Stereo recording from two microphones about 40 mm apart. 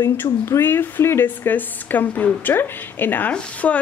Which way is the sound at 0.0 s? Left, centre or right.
Left.